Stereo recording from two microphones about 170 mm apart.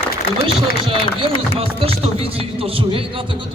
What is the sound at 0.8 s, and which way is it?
A man's voice, 30° right (ahead or behind).